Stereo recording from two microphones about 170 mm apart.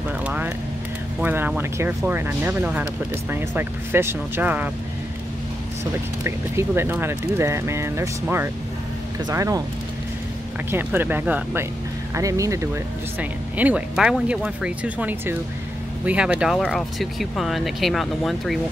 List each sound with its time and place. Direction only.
0.2 s vehicle: 10° right (ahead or behind)
1.2 s speech: 10° right (ahead or behind)
6.2 s speech: 15° right (ahead or behind)
10.7 s speech: 10° right (ahead or behind)